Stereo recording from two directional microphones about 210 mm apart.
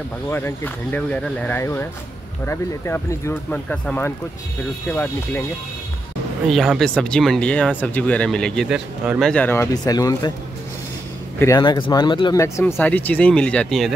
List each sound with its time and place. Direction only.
0.3 s speech: 10° left (ahead or behind)
6.4 s speech: centre (ahead or behind)
9.3 s speech: 10° left (ahead or behind)
11.3 s speech: 15° left (ahead or behind)